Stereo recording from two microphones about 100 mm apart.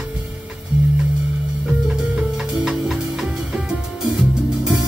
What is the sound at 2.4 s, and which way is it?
Music, 5° right (ahead or behind).